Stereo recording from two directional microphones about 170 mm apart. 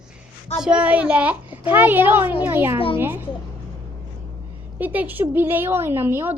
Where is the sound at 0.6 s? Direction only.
5° right (ahead or behind).